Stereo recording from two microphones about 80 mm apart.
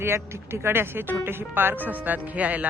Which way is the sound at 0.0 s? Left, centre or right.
Right.